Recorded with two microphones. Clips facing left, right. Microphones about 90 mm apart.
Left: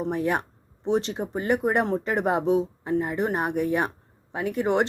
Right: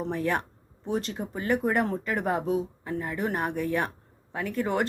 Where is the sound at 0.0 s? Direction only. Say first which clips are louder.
Left 3 dB; 15° left (ahead or behind).